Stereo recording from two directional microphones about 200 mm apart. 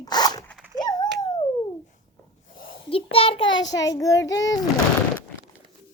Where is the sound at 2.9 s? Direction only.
30° left (ahead or behind).